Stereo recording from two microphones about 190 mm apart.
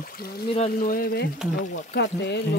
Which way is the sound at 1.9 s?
60° left (ahead or behind).